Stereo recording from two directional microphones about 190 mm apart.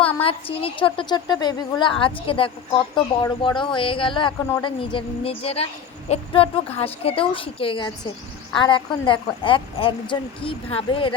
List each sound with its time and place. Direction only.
0.2 s a woman's voice: 30° left (ahead or behind)